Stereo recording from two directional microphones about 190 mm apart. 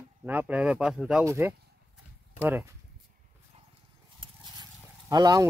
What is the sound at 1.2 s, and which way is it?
Speech, 15° right (ahead or behind).